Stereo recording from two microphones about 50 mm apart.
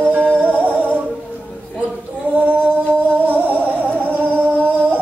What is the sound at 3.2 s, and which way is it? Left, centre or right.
Music, right.